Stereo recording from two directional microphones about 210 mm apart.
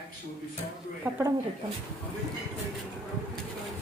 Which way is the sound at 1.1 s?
5° right (ahead or behind).